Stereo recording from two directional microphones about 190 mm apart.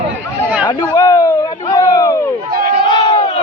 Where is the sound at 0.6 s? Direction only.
20° left (ahead or behind).